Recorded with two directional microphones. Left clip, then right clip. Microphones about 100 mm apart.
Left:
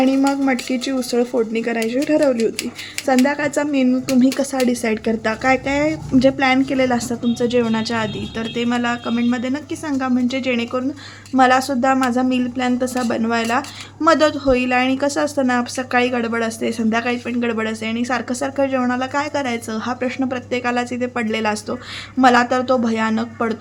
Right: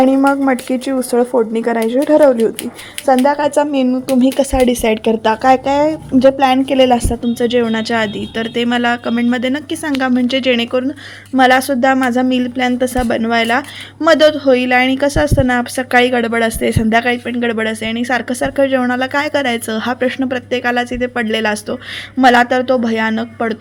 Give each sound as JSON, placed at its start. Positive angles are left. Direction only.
{"t": 0.0, "sound": "speech", "side_deg": -25}
{"t": 1.5, "sound": "speech", "side_deg": -30}
{"t": 2.0, "sound": "speech", "side_deg": -15}
{"t": 4.6, "sound": "a woman's voice", "side_deg": -40}
{"t": 6.7, "sound": "a woman's voice", "side_deg": -35}
{"t": 10.5, "sound": "a woman's voice", "side_deg": -45}
{"t": 20.1, "sound": "speech", "side_deg": -35}